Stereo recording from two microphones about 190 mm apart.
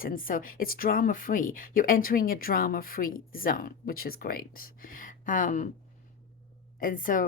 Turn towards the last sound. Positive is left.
turn(degrees=45)  # may be behind; listen again after turning